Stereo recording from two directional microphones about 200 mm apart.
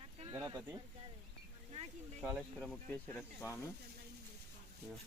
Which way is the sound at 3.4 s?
15° left (ahead or behind).